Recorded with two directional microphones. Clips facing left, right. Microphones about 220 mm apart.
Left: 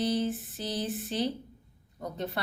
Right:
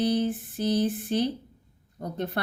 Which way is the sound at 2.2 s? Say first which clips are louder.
Right 4 dB; 55° right (ahead or behind).